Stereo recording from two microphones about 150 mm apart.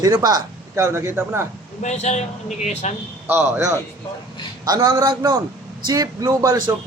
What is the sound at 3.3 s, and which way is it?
Speech, 15° right (ahead or behind).